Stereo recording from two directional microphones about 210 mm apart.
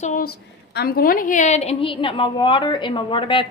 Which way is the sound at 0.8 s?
45° left (ahead or behind).